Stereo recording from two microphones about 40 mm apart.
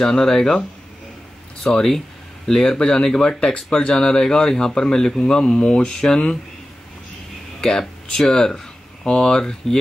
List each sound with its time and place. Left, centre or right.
0.0 s speech: centre
1.7 s speech: centre
8.1 s speech: centre